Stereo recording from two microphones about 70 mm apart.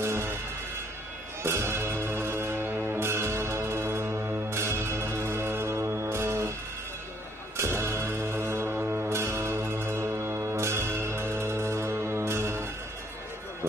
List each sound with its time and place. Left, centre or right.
0.0 s music: right
1.4 s music: right
7.5 s music: right
8.8 s a sound: centre
9.1 s music: right